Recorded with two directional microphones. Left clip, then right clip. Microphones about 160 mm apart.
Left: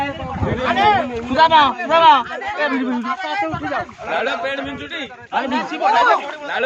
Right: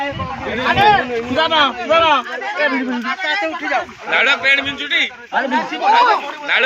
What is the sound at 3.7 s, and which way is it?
A man's voice, 55° left (ahead or behind).